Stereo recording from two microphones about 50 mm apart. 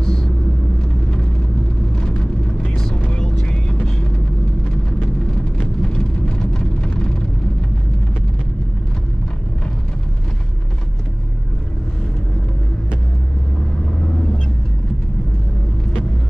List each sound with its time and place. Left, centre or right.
0.0 s vehicle: centre
2.0 s vehicle: centre
5.6 s vehicle: centre